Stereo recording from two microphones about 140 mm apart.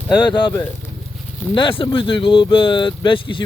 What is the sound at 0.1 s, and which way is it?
Speech, 35° left (ahead or behind).